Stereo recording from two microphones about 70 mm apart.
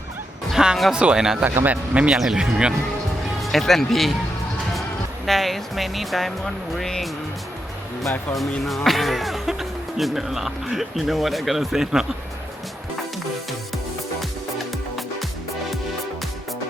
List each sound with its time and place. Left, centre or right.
0.5 s music: centre
0.9 s speech: centre
1.5 s a man's voice: right
1.7 s speech: centre
2.1 s speech: centre
3.4 s speech: centre
5.2 s speech: centre
8.6 s speech: centre